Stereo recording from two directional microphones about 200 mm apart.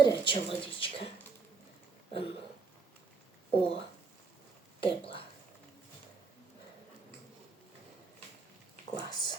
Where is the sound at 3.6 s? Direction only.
30° left (ahead or behind).